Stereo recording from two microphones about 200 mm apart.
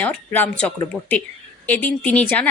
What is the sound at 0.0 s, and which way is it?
A woman's voice, 10° left (ahead or behind).